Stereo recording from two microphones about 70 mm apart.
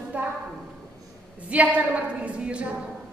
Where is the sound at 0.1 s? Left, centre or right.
Right.